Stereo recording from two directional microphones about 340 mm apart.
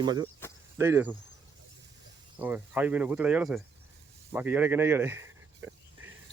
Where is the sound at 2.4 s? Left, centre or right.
Centre.